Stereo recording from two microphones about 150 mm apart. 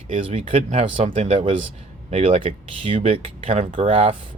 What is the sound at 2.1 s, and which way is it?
Speech, 50° right (ahead or behind).